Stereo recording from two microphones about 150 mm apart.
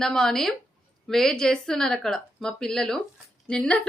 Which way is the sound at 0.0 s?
5° left (ahead or behind).